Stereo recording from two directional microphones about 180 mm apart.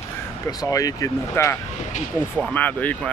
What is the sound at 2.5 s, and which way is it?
Speech, 10° left (ahead or behind).